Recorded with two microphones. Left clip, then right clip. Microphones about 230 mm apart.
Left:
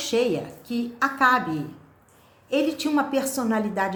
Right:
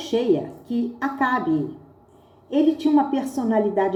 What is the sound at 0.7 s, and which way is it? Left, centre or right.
Speech, left.